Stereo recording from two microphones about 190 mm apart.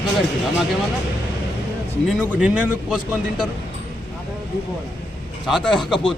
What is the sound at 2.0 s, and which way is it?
Speech, centre (ahead or behind).